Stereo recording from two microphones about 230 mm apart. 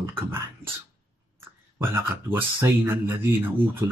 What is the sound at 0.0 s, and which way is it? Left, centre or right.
Speech, centre.